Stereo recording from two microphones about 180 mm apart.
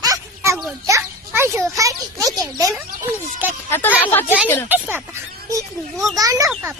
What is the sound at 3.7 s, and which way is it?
Speech, 15° left (ahead or behind).